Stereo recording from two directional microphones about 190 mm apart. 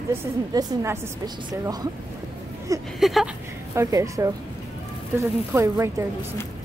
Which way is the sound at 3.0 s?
Centre (ahead or behind).